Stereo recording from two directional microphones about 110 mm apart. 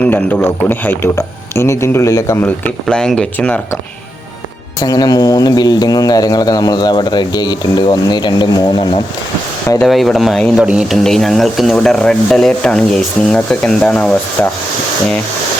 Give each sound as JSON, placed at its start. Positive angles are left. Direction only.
{"t": 0.0, "sound": "speech", "side_deg": 15}
{"t": 2.8, "sound": "speech", "side_deg": 5}
{"t": 4.8, "sound": "speech", "side_deg": 35}
{"t": 9.8, "sound": "speech", "side_deg": 0}
{"t": 10.6, "sound": "speech", "side_deg": -10}